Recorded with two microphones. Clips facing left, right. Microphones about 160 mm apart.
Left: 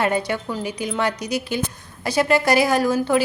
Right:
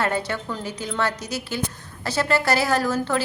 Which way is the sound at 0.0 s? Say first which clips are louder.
Left 3 dB; 15° left (ahead or behind).